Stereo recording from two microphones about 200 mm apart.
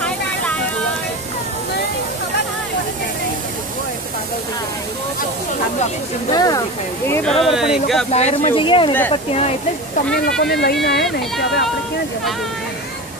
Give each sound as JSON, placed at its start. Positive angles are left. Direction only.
{"t": 6.3, "sound": "speech", "side_deg": 20}
{"t": 7.4, "sound": "speech", "side_deg": 0}
{"t": 8.1, "sound": "speech", "side_deg": 35}
{"t": 10.4, "sound": "speech", "side_deg": 55}